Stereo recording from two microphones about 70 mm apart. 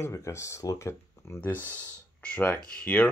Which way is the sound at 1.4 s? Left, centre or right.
Left.